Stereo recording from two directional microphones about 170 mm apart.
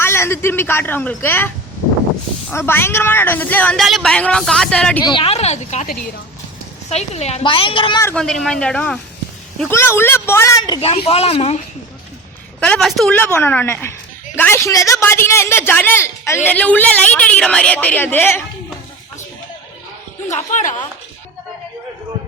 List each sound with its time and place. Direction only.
0.0 s a woman's voice: 15° left (ahead or behind)
5.0 s a woman's voice: 30° left (ahead or behind)
6.9 s a woman's voice: 40° left (ahead or behind)
8.0 s a woman's voice: 5° left (ahead or behind); by 10.8 s 25° left (ahead or behind)
10.8 s a woman's voice: 35° left (ahead or behind)
12.5 s a woman's voice: 5° left (ahead or behind)
20.2 s speech: 45° left (ahead or behind)